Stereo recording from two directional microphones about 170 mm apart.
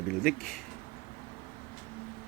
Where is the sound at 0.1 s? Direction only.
Centre (ahead or behind).